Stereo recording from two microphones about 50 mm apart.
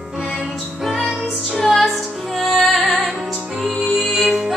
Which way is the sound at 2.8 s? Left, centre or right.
Left.